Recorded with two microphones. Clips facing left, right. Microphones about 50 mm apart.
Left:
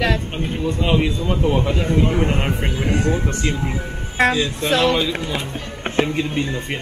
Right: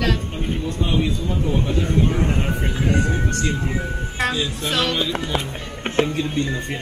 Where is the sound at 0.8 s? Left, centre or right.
Left.